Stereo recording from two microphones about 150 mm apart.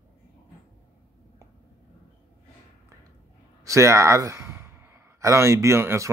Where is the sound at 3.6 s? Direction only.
20° right (ahead or behind).